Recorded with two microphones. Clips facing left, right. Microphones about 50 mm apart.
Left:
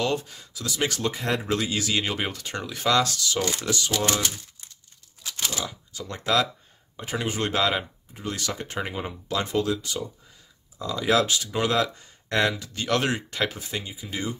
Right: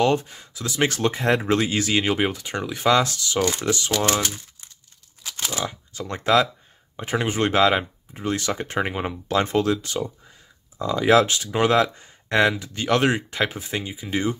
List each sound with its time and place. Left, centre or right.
0.0 s speech: right
2.0 s speech: centre
5.6 s speech: right
10.8 s speech: right